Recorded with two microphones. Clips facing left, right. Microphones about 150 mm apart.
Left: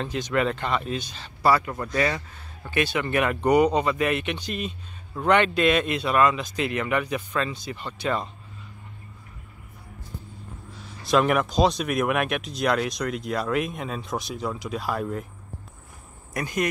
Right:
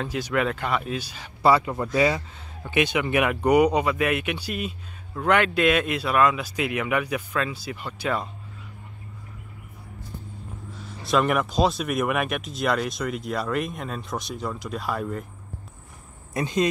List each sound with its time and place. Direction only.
0.0 s speech: 5° right (ahead or behind)
1.4 s speech: 20° right (ahead or behind)
11.0 s speech: centre (ahead or behind)
16.3 s speech: 25° right (ahead or behind)